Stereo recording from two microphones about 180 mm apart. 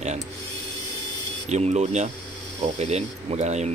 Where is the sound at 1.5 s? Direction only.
40° right (ahead or behind).